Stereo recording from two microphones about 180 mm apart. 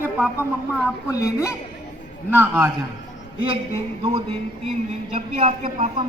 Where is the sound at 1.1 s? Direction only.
15° left (ahead or behind).